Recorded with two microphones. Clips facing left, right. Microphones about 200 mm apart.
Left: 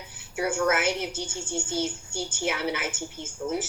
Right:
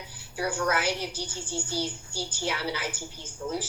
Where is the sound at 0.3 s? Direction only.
25° left (ahead or behind).